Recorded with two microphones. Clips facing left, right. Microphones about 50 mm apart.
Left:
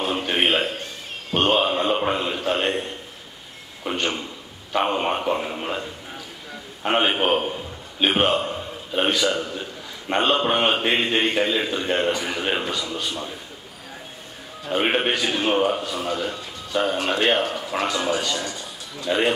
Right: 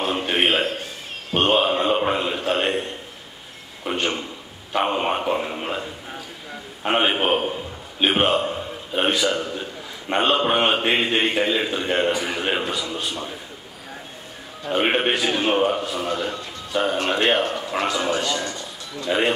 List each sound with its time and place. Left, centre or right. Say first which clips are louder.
0.0 s a sound: right 1 dB; centre
3.9 s a man's voice: right 1 dB; centre
14.6 s a man's voice: right 1 dB; centre